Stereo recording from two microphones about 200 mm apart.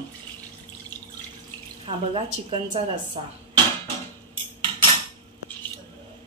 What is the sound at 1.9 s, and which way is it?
Speech, 25° right (ahead or behind).